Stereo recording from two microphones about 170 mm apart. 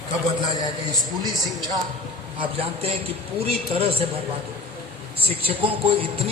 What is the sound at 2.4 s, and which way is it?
A man's voice, 35° right (ahead or behind).